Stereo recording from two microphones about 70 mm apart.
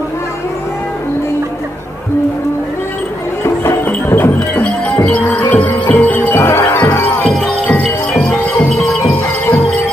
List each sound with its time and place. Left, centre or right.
3.4 s music: left
5.0 s music: centre
5.4 s music: left
6.4 s music: left
6.7 s music: left
7.2 s music: centre